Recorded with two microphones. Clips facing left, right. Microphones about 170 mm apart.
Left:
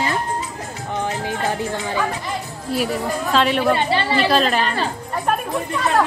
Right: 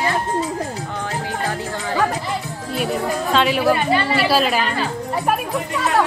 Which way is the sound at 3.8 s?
30° left (ahead or behind).